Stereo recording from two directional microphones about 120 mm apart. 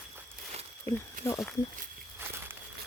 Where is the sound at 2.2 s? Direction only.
20° right (ahead or behind).